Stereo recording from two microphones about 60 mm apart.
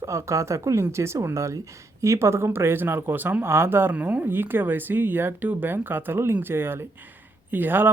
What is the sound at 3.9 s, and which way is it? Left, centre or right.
Speech, right.